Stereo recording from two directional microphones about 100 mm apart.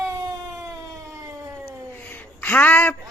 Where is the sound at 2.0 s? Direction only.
15° left (ahead or behind).